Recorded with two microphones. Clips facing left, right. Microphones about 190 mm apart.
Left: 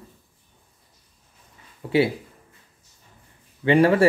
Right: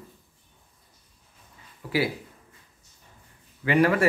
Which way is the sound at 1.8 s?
25° left (ahead or behind).